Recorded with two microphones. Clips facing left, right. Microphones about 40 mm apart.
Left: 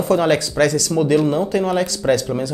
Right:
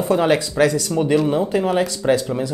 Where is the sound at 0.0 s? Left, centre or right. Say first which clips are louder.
Left 1 dB; centre.